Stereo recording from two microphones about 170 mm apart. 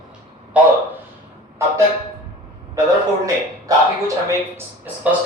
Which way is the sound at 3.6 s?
20° right (ahead or behind).